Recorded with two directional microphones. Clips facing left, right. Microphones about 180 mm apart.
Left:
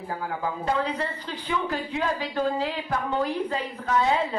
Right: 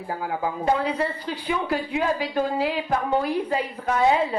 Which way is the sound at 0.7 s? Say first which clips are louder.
Right 3 dB; 10° right (ahead or behind).